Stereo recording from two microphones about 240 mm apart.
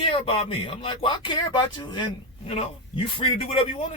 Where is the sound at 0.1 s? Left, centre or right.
Left.